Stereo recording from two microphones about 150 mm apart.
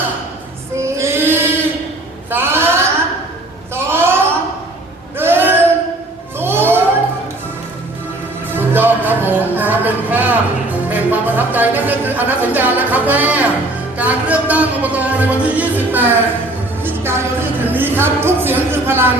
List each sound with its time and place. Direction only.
0.8 s child singing: 20° right (ahead or behind)
2.3 s a sound: 15° right (ahead or behind)
8.5 s music: 15° right (ahead or behind)